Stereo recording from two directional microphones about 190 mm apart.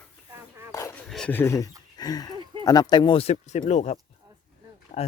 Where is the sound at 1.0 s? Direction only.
5° left (ahead or behind).